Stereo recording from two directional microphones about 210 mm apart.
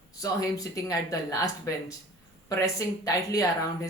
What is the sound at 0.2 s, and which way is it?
Speech, 15° left (ahead or behind).